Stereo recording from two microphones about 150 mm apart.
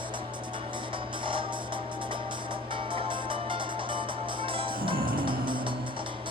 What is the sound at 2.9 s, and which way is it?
Music, 35° right (ahead or behind).